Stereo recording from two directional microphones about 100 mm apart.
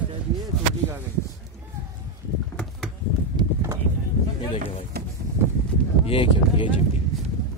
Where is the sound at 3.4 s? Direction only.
50° right (ahead or behind).